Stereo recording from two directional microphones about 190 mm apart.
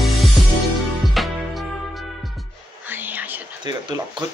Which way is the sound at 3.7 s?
25° right (ahead or behind).